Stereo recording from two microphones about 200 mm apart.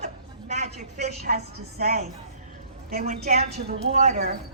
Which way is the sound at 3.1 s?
35° right (ahead or behind).